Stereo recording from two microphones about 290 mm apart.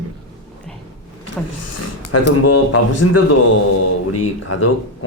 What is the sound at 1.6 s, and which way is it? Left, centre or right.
Speech, left.